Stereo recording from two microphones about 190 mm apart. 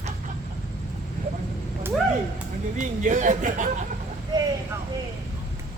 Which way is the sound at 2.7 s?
40° right (ahead or behind).